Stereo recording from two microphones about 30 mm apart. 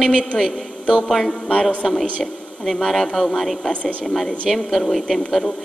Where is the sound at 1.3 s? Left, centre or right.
Left.